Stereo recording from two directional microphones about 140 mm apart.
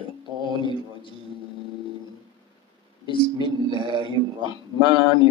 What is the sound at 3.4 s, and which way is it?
Speech, 35° right (ahead or behind).